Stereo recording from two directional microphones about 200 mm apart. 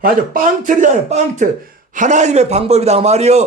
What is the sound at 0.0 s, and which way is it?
A man's voice, 45° right (ahead or behind).